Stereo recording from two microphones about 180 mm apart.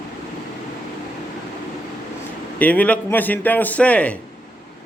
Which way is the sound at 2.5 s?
10° left (ahead or behind).